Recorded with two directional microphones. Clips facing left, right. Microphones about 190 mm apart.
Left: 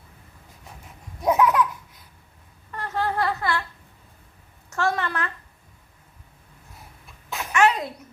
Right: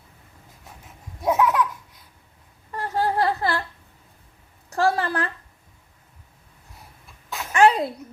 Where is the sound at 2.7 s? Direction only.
30° right (ahead or behind).